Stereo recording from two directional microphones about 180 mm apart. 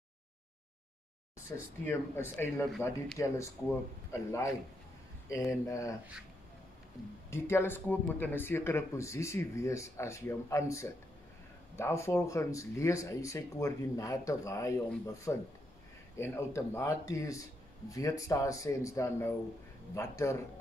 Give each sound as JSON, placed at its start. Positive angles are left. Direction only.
{"t": 1.9, "sound": "speech", "side_deg": 10}
{"t": 5.5, "sound": "speech", "side_deg": 15}
{"t": 7.2, "sound": "speech", "side_deg": 15}